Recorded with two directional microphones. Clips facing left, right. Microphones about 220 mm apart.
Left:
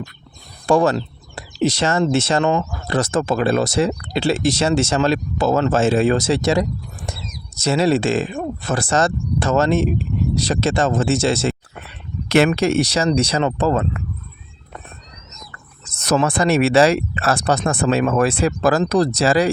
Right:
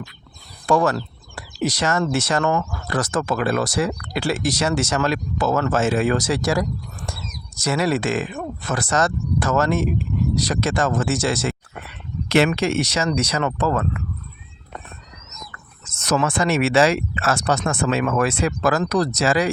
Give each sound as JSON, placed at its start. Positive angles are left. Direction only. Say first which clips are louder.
{"t": 0.7, "sound": "speech", "louder": "left 3 dB", "side_deg": 25}
{"t": 12.5, "sound": "speech", "louder": "left 4 dB", "side_deg": 35}
{"t": 15.5, "sound": "speech", "louder": "left 1 dB", "side_deg": 35}